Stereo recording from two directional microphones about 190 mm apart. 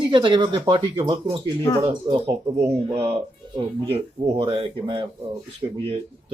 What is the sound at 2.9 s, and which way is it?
Speech, 15° right (ahead or behind).